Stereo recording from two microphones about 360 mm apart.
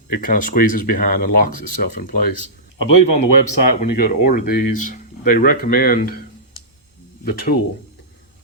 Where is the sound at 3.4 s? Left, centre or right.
Left.